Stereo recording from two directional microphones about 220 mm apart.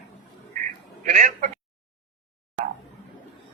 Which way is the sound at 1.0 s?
35° right (ahead or behind).